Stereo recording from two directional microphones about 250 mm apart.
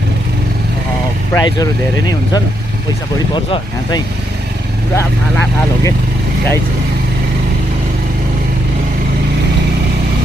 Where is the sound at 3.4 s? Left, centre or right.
Centre.